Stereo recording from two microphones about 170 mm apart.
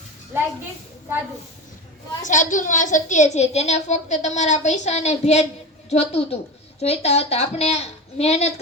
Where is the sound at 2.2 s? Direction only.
50° left (ahead or behind).